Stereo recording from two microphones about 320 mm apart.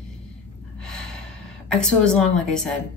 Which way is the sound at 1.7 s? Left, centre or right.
Centre.